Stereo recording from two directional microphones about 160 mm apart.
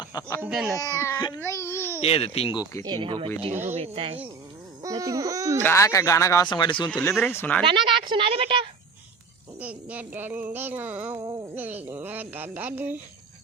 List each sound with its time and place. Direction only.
0.0 s speech: 25° left (ahead or behind)
0.4 s a sound: 5° right (ahead or behind)
0.8 s speech: 20° left (ahead or behind)
2.0 s speech: 40° left (ahead or behind)
2.8 s a woman's voice: 30° right (ahead or behind)
4.8 s speech: 20° right (ahead or behind)
5.6 s speech: 20° left (ahead or behind)
7.0 s speech: 15° left (ahead or behind)
7.6 s a woman's voice: 30° right (ahead or behind)
9.6 s a sound: 10° right (ahead or behind)
11.2 s speech: 25° right (ahead or behind)
11.5 s a sound: 10° right (ahead or behind)